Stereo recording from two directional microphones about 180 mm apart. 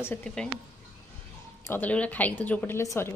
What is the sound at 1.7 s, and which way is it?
A woman's voice, 10° left (ahead or behind).